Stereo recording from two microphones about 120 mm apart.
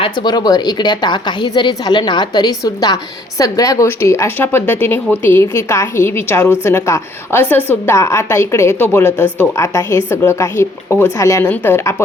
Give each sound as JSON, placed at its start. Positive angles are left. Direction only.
{"t": 0.0, "sound": "a woman's voice", "side_deg": 40}